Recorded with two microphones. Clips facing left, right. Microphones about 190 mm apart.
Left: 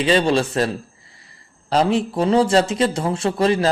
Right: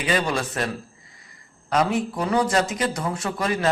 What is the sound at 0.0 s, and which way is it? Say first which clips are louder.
Speech: left 7 dB; 30° left (ahead or behind).